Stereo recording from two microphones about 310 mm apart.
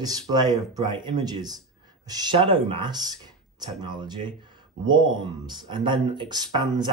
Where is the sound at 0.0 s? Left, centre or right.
Centre.